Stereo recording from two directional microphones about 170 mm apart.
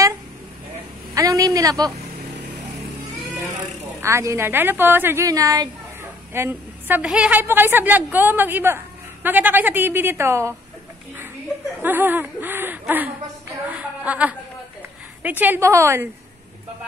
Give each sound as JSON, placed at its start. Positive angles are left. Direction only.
{"t": 1.1, "sound": "a woman's voice", "side_deg": -20}
{"t": 4.0, "sound": "a woman's voice", "side_deg": -15}
{"t": 11.8, "sound": "speech", "side_deg": -10}
{"t": 13.7, "sound": "a sound", "side_deg": -10}
{"t": 15.2, "sound": "a woman's voice", "side_deg": -10}